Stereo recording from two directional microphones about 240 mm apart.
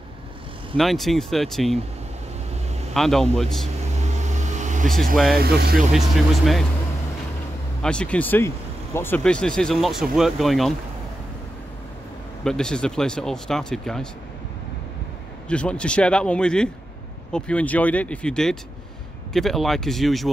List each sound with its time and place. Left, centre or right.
0.7 s speech: centre
2.9 s speech: centre
4.0 s vehicle: right
5.1 s speech: centre
5.4 s speech: right
5.8 s speech: centre
7.8 s speech: centre
12.4 s speech: centre
15.4 s speech: centre